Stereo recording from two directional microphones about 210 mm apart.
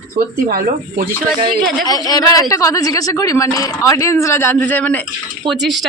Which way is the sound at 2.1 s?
15° left (ahead or behind).